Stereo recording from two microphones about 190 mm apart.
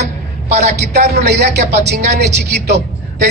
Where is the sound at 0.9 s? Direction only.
60° right (ahead or behind).